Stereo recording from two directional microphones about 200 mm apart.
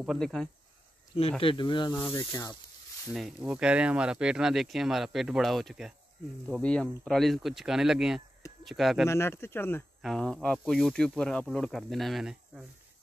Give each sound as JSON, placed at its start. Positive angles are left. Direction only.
{"t": 0.0, "sound": "speech", "side_deg": 0}
{"t": 1.4, "sound": "speech", "side_deg": 25}
{"t": 3.1, "sound": "speech", "side_deg": -5}
{"t": 9.0, "sound": "speech", "side_deg": 10}